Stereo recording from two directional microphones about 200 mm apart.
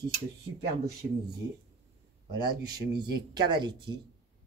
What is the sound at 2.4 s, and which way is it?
Speech, 20° right (ahead or behind).